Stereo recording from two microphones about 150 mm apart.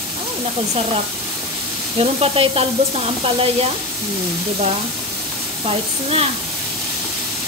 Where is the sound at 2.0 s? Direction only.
40° right (ahead or behind).